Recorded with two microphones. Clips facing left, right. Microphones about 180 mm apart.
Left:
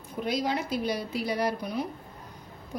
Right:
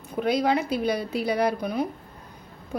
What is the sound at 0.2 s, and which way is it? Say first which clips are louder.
A woman's voice: right 6 dB; 60° right (ahead or behind).